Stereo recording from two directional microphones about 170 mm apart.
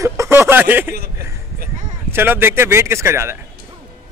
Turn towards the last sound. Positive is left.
turn(degrees=-15)  # may be behind; listen again after turning